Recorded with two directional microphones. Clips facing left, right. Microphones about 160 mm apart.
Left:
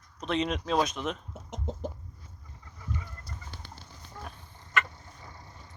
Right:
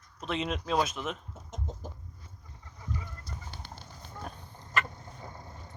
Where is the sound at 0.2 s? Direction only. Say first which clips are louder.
Left 3 dB; 5° right (ahead or behind).